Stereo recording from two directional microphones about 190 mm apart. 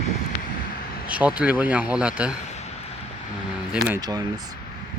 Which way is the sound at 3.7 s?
5° right (ahead or behind).